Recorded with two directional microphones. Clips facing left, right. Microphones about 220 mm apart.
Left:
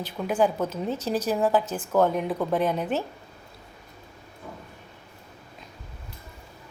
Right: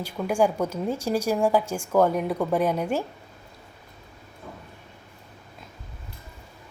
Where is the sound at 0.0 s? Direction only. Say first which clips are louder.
Right 1 dB; 10° right (ahead or behind).